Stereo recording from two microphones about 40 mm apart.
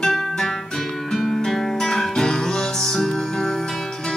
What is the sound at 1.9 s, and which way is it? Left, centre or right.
Music, centre.